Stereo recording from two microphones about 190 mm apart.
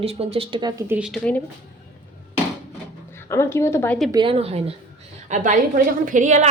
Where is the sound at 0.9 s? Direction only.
5° right (ahead or behind).